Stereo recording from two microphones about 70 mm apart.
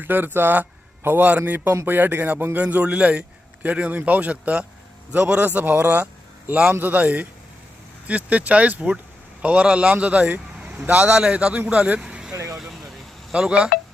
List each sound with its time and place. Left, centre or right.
0.0 s a man's voice: right
6.5 s a man's voice: centre
6.7 s a man's voice: right
12.3 s vehicle: right
13.3 s a man's voice: centre